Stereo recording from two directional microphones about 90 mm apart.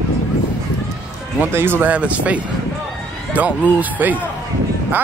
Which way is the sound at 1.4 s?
25° right (ahead or behind).